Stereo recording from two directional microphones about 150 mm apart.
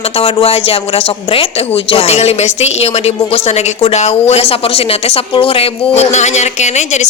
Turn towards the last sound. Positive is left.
turn(degrees=50)  # may be behind; listen again after turning